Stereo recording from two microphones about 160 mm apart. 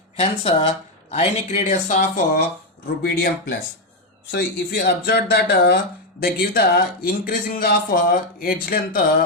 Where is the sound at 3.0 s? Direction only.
80° left.